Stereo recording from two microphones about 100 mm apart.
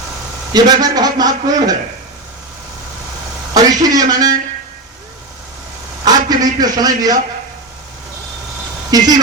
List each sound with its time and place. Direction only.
0.5 s a man's voice: 40° right (ahead or behind)
3.5 s a man's voice: 40° right (ahead or behind)
6.1 s a man's voice: 40° right (ahead or behind)
8.9 s a man's voice: 40° right (ahead or behind)